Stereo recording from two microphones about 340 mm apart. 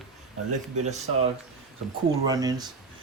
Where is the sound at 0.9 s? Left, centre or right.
Centre.